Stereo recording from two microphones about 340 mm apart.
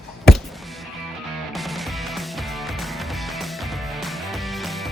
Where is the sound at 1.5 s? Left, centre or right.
Centre.